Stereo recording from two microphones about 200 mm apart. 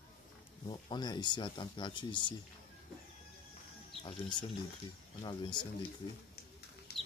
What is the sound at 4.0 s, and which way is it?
Speech, 25° left (ahead or behind).